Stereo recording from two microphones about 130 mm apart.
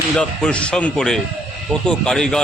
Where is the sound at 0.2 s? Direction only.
10° left (ahead or behind).